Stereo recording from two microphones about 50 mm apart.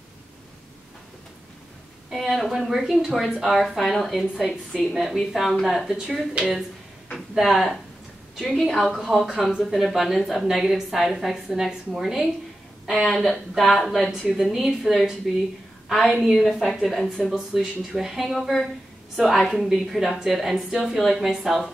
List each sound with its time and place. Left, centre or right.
2.0 s a woman's voice: centre
4.5 s a woman's voice: centre
4.9 s a woman's voice: centre
5.9 s speech: centre
7.3 s a woman's voice: centre
13.0 s a woman's voice: centre